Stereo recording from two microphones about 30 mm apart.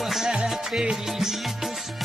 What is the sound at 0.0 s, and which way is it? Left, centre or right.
Music, centre.